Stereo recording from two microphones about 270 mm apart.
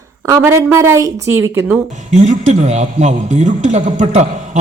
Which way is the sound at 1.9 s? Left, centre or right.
Right.